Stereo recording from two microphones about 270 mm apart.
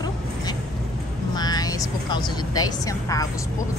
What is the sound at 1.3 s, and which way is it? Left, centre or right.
Speech, centre.